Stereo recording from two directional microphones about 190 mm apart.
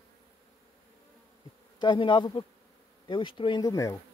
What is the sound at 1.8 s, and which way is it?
Speech, 25° left (ahead or behind).